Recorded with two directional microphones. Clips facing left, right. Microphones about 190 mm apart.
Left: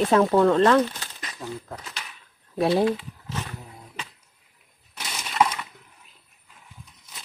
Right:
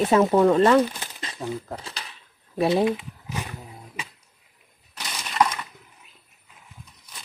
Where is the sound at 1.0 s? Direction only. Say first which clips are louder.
Right 3 dB; 25° right (ahead or behind).